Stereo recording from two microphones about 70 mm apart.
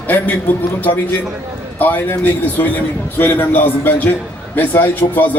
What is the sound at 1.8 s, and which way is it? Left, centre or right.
Speech, left.